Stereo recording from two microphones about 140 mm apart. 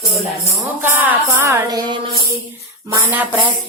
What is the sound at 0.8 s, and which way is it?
Music, 15° right (ahead or behind).